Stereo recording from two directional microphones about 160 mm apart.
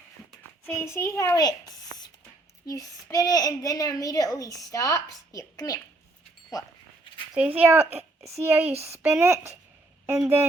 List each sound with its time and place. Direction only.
0.6 s a child's voice: 15° left (ahead or behind)
2.6 s a child's voice: 20° left (ahead or behind)
6.5 s a sound: 25° left (ahead or behind)
7.3 s speech: 10° right (ahead or behind)
7.9 s a sound: 40° right (ahead or behind)
8.4 s speech: 10° right (ahead or behind)
8.7 s speech: 40° right (ahead or behind)
9.2 s speech: 15° right (ahead or behind)